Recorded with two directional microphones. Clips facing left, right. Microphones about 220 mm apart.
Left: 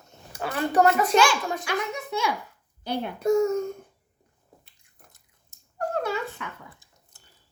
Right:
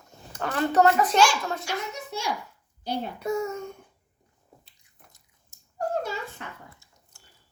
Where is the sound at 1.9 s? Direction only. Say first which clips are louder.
Left 4 dB; 60° left (ahead or behind).